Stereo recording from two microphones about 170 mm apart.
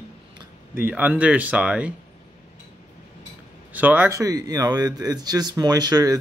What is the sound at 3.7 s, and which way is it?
Speech, 10° right (ahead or behind).